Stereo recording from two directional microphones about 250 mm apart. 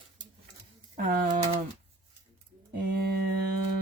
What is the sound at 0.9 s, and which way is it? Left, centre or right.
Speech, right.